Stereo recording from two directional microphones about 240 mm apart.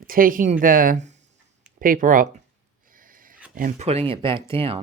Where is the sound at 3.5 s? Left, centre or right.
Right.